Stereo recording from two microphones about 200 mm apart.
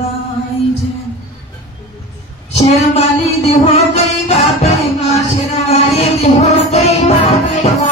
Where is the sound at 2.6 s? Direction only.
30° left (ahead or behind).